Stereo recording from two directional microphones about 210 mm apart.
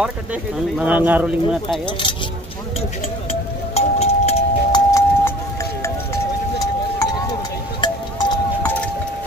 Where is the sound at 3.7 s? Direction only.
30° left (ahead or behind).